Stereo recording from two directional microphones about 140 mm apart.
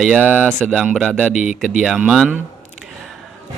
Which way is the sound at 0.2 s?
10° right (ahead or behind).